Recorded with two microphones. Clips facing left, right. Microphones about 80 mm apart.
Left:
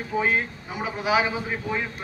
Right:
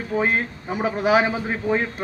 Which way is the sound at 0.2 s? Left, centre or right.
Right.